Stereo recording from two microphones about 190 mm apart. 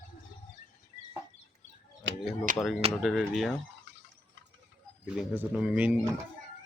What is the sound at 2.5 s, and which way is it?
Speech, 45° right (ahead or behind).